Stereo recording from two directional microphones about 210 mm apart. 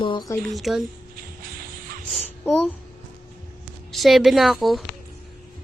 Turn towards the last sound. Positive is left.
turn(degrees=0)  # may be behind; listen again after turning